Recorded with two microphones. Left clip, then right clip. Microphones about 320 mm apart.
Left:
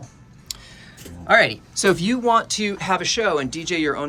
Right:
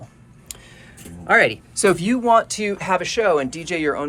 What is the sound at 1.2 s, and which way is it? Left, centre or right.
Speech, centre.